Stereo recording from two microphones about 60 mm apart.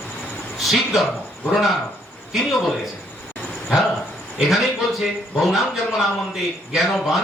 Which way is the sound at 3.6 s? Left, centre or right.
Centre.